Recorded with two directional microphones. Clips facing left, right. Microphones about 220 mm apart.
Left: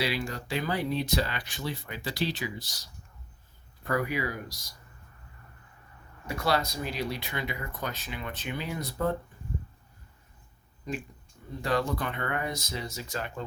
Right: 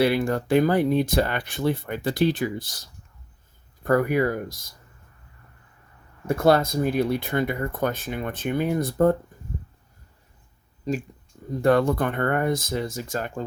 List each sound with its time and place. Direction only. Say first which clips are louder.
0.0 s speech: right 10 dB; 55° right (ahead or behind)
6.2 s speech: right 9 dB; 50° right (ahead or behind)
10.9 s speech: right 8 dB; 35° right (ahead or behind)
11.6 s speech: right 9 dB; 55° right (ahead or behind)